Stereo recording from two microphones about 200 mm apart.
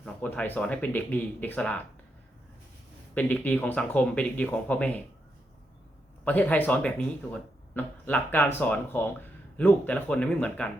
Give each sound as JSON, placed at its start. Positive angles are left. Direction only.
{"t": 0.0, "sound": "speech", "side_deg": 5}
{"t": 3.2, "sound": "speech", "side_deg": 10}
{"t": 6.2, "sound": "speech", "side_deg": 10}